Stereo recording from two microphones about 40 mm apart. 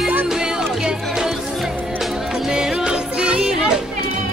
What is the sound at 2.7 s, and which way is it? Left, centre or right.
Music, right.